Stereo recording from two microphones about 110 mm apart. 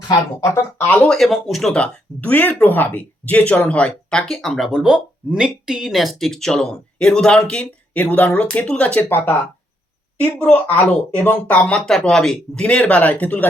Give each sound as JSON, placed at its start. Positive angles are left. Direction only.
{"t": 0.4, "sound": "speech", "side_deg": 25}
{"t": 0.9, "sound": "speech", "side_deg": 5}